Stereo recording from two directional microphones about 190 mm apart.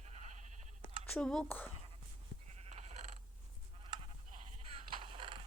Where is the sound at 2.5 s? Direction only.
35° right (ahead or behind).